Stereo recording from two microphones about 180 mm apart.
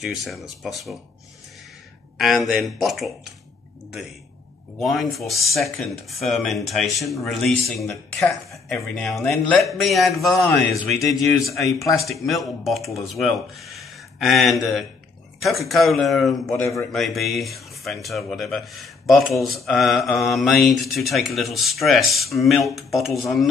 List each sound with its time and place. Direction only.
0.0 s speech: centre (ahead or behind)
2.1 s speech: centre (ahead or behind)
4.7 s speech: centre (ahead or behind)
16.5 s a man's voice: 15° left (ahead or behind)
16.9 s speech: centre (ahead or behind)